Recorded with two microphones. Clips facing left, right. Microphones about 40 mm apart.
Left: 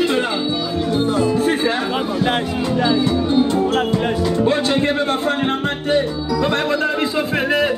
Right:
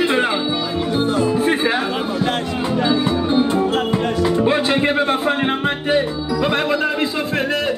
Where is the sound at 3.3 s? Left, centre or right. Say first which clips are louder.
Even; centre.